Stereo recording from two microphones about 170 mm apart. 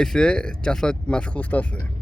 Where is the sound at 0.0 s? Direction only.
5° left (ahead or behind).